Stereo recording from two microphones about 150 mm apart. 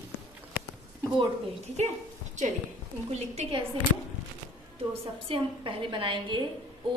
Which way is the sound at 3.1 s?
45° right (ahead or behind).